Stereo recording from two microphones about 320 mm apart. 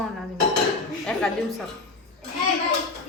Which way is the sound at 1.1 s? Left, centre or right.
Centre.